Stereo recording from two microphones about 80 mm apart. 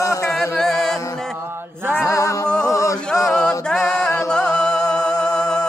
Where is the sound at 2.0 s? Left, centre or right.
Left.